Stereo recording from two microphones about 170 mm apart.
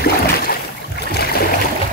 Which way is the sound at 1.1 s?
65° left (ahead or behind).